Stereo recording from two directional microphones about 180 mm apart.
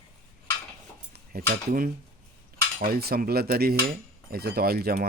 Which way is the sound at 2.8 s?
60° right (ahead or behind).